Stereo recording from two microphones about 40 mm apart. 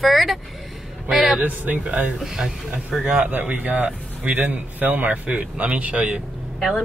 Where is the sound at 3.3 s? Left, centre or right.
Right.